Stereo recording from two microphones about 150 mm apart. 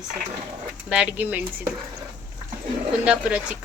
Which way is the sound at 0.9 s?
10° right (ahead or behind).